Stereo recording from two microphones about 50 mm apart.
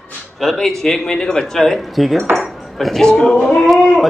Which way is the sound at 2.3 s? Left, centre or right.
Centre.